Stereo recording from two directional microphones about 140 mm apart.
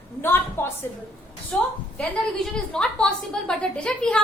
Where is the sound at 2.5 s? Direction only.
5° left (ahead or behind).